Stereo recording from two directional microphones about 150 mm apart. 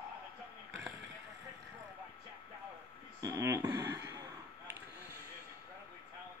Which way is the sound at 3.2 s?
20° right (ahead or behind).